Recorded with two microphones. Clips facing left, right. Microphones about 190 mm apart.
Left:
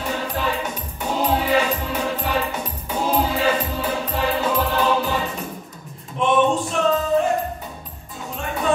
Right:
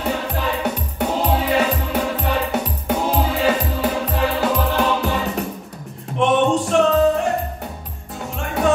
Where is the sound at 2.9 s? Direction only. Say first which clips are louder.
Right 4 dB; 70° right (ahead or behind).